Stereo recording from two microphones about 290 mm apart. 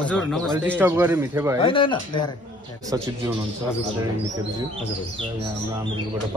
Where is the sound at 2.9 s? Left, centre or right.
Centre.